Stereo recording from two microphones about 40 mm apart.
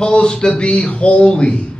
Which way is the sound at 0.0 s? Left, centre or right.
Left.